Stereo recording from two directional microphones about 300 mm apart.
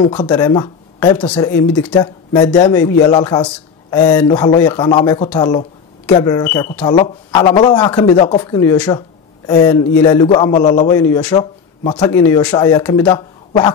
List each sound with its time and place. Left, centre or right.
0.0 s a man's voice: centre